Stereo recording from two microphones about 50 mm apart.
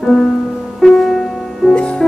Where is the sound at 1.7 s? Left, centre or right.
Centre.